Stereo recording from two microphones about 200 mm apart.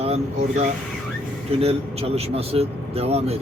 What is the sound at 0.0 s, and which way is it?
Speech, 30° right (ahead or behind).